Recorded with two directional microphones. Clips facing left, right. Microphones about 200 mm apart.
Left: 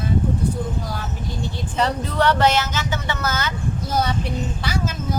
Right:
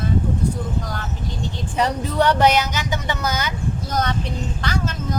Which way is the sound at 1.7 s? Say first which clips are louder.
Right 1 dB; 15° right (ahead or behind).